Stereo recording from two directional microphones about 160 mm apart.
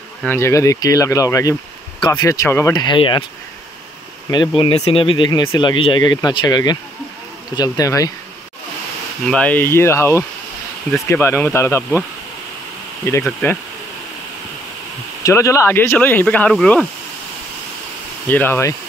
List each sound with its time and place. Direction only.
0.2 s speech: 15° left (ahead or behind); by 3.3 s 30° left (ahead or behind)
4.3 s speech: 30° left (ahead or behind)
9.2 s speech: 5° left (ahead or behind)
13.2 s speech: 10° left (ahead or behind)
15.2 s speech: 20° left (ahead or behind)
18.3 s speech: 15° left (ahead or behind)